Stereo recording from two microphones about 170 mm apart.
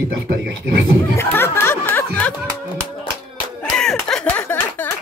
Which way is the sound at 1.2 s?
15° left (ahead or behind).